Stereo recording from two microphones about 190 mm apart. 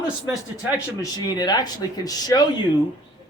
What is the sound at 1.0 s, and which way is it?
Speech, 20° left (ahead or behind).